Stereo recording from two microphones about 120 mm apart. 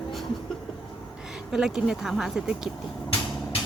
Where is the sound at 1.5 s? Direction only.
5° right (ahead or behind).